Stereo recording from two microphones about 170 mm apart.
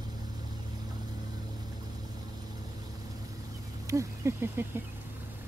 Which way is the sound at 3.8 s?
15° right (ahead or behind).